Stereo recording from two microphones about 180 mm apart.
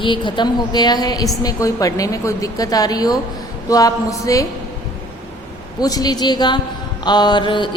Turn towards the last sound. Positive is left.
turn(degrees=25)  # may be behind; listen again after turning